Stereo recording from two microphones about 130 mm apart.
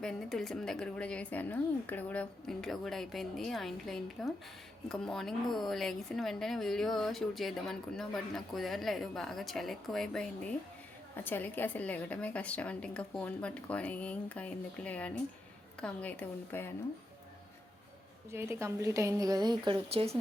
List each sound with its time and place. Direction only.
0.0 s speech: 5° left (ahead or behind)
11.2 s a woman's voice: 15° left (ahead or behind)
18.3 s a woman's voice: 20° right (ahead or behind)
19.9 s speech: 50° right (ahead or behind)